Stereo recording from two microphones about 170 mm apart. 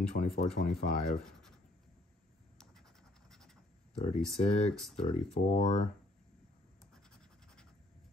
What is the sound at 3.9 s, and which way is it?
Speech, 40° left (ahead or behind).